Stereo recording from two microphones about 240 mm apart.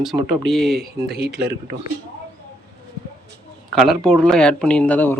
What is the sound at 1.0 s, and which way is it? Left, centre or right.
Speech, right.